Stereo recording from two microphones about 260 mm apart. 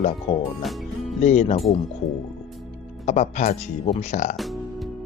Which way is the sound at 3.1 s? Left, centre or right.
Left.